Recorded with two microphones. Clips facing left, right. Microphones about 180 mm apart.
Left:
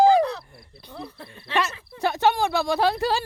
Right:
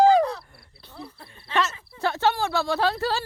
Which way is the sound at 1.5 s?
10° left (ahead or behind).